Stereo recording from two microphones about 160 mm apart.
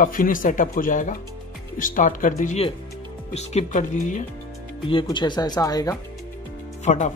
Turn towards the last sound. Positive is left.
turn(degrees=50)  # may be behind; listen again after turning